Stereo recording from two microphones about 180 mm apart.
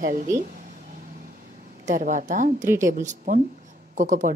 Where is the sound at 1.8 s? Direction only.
45° right (ahead or behind).